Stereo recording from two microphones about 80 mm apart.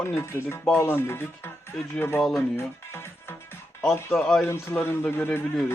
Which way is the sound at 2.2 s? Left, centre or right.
Centre.